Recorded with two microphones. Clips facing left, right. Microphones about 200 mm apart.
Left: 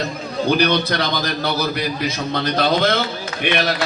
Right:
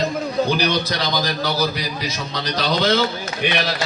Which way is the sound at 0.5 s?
60° left (ahead or behind).